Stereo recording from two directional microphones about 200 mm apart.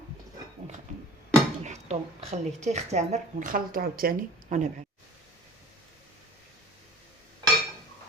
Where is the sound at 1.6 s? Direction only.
35° right (ahead or behind).